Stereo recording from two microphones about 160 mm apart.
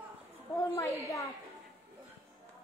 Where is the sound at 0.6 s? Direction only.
15° left (ahead or behind).